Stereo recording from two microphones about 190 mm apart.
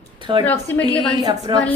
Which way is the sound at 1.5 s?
25° right (ahead or behind).